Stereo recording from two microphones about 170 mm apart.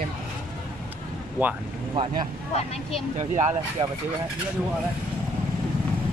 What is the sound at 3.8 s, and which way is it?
Speech, 30° right (ahead or behind).